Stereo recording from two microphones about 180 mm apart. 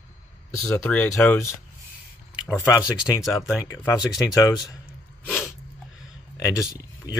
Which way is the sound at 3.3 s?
15° left (ahead or behind).